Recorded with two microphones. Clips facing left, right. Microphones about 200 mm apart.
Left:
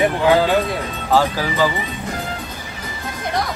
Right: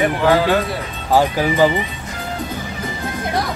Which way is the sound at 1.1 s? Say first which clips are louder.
Right 2 dB; 20° right (ahead or behind).